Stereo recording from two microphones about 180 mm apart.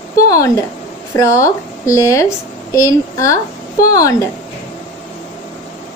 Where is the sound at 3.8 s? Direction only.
20° left (ahead or behind).